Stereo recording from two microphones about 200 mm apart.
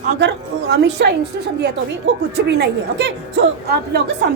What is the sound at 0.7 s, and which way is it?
Speech, 60° right (ahead or behind).